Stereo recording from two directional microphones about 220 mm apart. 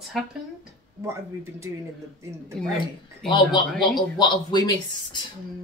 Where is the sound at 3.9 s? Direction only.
20° left (ahead or behind).